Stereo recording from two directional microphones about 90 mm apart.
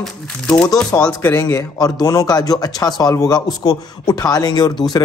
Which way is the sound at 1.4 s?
45° left (ahead or behind).